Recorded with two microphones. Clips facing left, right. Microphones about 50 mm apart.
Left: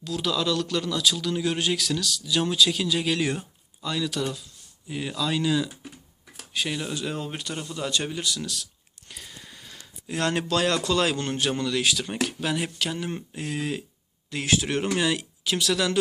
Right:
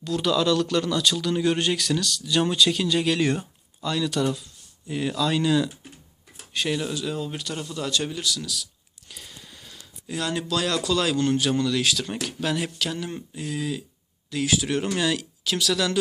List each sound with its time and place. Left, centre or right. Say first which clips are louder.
0.0 s speech: right 4 dB; centre
6.9 s speech: right 1 dB; left
9.1 s a sound: left 1 dB; centre
10.2 s speech: left 2 dB; left
10.8 s speech: right 2 dB; left
13.3 s speech: right 2 dB; left